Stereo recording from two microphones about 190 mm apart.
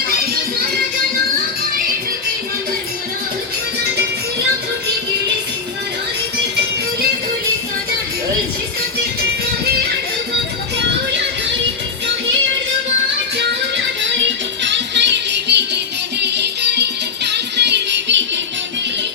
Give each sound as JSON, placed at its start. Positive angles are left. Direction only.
{"t": 13.3, "sound": "music", "side_deg": -65}